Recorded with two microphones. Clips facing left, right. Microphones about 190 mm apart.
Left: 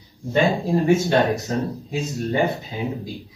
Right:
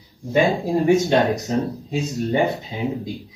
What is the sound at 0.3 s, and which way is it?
Speech, 15° right (ahead or behind).